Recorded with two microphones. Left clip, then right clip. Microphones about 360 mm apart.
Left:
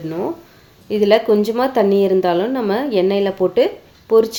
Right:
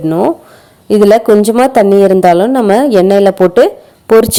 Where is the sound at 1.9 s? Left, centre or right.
Right.